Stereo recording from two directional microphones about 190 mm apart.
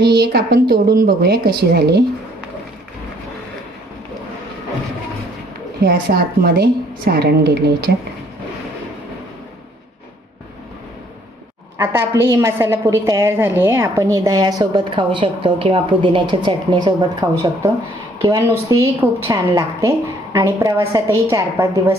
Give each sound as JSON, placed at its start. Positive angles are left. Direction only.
{"t": 0.0, "sound": "a woman's voice", "side_deg": -60}
{"t": 5.8, "sound": "a woman's voice", "side_deg": -55}
{"t": 11.8, "sound": "a woman's voice", "side_deg": -10}